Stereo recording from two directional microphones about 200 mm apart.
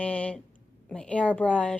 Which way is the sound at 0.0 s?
5° left (ahead or behind).